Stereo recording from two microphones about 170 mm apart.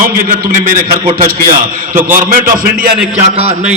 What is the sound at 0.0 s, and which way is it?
Speech, 55° right (ahead or behind).